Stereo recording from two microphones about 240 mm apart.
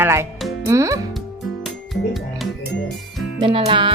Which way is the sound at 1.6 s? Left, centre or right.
Centre.